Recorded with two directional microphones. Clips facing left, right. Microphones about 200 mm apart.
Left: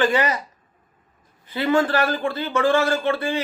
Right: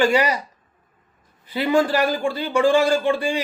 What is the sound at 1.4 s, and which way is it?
A man's voice, 15° right (ahead or behind).